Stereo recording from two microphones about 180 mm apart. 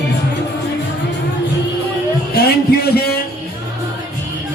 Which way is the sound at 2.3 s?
60° left (ahead or behind).